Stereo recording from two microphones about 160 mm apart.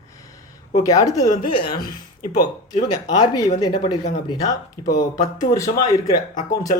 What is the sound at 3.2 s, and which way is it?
Speech, 25° left (ahead or behind).